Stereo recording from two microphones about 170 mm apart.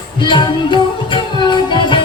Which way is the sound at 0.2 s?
25° left (ahead or behind).